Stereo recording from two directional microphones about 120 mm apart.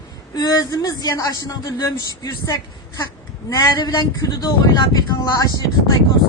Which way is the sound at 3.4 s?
35° left (ahead or behind).